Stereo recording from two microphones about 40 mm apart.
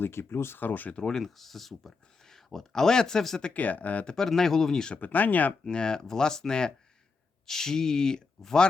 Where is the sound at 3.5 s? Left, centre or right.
Left.